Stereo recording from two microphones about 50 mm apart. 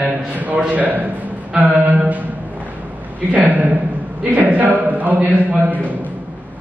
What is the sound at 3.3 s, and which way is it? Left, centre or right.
Speech, right.